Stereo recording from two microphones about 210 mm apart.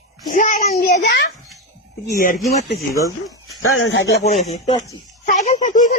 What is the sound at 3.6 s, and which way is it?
Speech, 75° left (ahead or behind).